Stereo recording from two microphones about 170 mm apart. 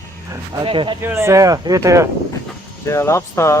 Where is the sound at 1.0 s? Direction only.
15° right (ahead or behind).